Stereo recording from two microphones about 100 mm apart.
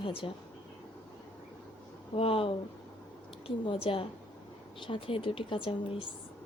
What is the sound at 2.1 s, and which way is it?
Speech, 70° left (ahead or behind).